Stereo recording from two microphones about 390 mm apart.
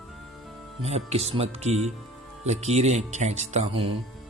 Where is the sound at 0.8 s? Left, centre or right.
Centre.